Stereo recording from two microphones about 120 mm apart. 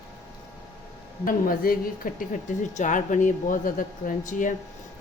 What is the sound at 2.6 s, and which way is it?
Speech, 90° left.